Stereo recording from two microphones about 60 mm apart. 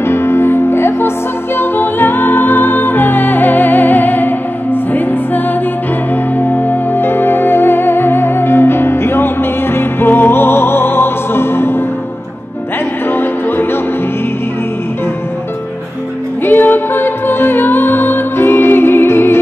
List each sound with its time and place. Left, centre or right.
0.0 s music: left
6.3 s music: left
13.1 s music: left
16.4 s music: left